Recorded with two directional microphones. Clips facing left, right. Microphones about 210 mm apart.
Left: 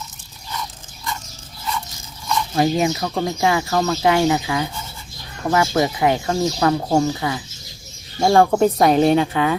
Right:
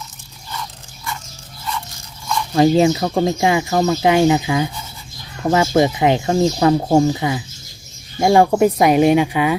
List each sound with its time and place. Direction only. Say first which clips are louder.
2.6 s speech: right 6 dB; 30° right (ahead or behind)